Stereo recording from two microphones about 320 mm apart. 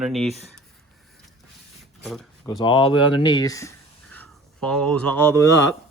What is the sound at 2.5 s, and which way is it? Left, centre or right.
Speech, centre.